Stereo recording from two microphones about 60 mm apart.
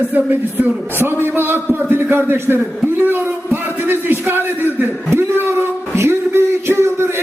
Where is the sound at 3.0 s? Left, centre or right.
Right.